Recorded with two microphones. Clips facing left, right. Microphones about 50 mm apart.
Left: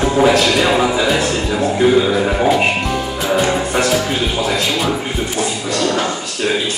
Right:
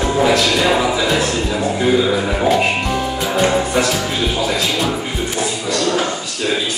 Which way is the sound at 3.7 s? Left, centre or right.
Centre.